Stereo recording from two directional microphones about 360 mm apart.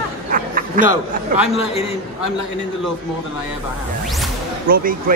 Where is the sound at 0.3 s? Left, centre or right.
Right.